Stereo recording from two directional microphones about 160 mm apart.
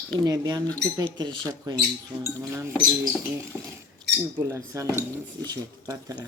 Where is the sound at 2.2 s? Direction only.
15° right (ahead or behind).